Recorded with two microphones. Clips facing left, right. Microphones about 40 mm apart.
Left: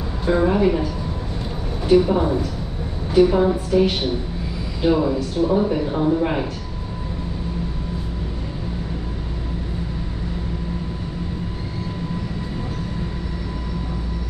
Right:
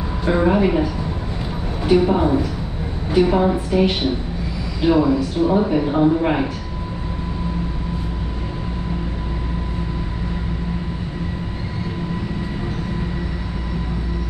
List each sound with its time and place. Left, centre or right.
0.3 s a woman's voice: centre
1.9 s a woman's voice: centre
4.8 s speech: centre
5.5 s a woman's voice: centre